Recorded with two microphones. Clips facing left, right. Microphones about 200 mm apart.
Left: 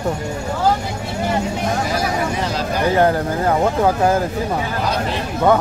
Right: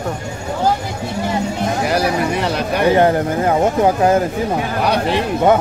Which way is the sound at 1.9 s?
65° right (ahead or behind).